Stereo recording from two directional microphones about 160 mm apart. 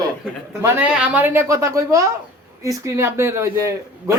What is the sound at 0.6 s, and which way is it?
A man's voice, 10° right (ahead or behind).